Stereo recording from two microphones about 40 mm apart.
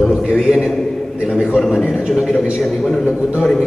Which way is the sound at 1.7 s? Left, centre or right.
Right.